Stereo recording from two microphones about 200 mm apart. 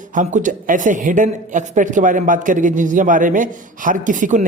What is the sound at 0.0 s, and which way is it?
A man's voice, 40° right (ahead or behind).